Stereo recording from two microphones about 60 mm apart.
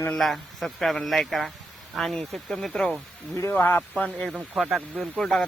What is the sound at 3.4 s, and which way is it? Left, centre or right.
Speech, left.